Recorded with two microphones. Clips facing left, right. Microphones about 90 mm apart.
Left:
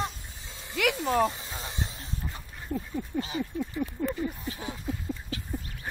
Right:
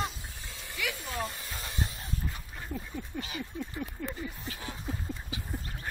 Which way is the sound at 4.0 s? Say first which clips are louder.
Left 7 dB; 30° left (ahead or behind).